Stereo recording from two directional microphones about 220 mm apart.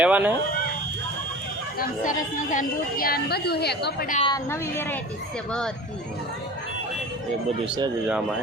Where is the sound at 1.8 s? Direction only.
35° left (ahead or behind).